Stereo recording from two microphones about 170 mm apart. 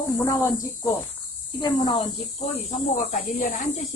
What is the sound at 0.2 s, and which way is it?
Speech, 15° left (ahead or behind).